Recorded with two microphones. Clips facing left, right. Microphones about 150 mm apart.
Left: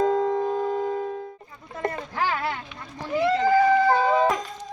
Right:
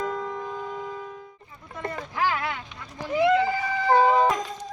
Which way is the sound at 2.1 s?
30° left (ahead or behind).